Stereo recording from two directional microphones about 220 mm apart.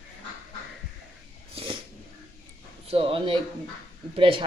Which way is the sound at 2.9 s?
25° right (ahead or behind).